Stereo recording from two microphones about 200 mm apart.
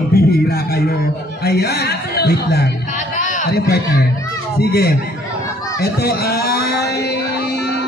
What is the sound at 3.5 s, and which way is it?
A man's voice, 55° left (ahead or behind).